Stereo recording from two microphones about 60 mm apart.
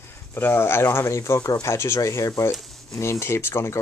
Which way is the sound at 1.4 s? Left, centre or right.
Left.